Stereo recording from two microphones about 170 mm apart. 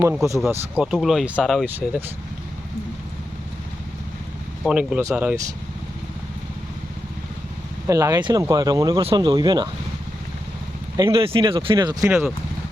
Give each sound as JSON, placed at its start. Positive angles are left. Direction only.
{"t": 0.0, "sound": "speech", "side_deg": -5}
{"t": 4.6, "sound": "speech", "side_deg": -5}
{"t": 7.9, "sound": "speech", "side_deg": -20}
{"t": 10.9, "sound": "speech", "side_deg": -30}
{"t": 12.0, "sound": "speech", "side_deg": -15}